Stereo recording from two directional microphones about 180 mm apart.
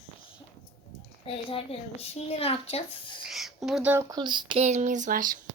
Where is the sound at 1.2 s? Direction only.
30° left (ahead or behind).